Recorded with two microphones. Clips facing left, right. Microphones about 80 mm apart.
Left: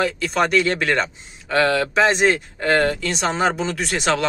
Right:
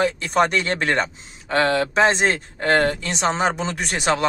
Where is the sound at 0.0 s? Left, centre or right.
Right.